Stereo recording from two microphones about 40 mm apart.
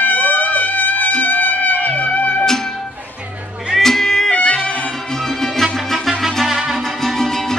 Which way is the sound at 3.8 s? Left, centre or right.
Centre.